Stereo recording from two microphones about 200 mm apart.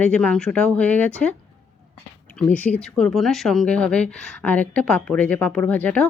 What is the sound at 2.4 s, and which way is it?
Speech, 5° left (ahead or behind).